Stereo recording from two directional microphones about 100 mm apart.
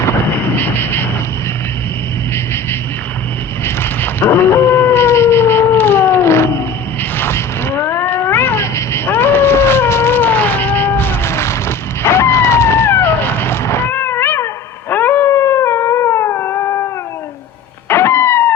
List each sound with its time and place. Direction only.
0.3 s vehicle: 20° left (ahead or behind)
3.6 s howl: 20° left (ahead or behind)
7.2 s cat: 25° left (ahead or behind)
14.8 s dog: 20° left (ahead or behind)
17.8 s music: 25° left (ahead or behind)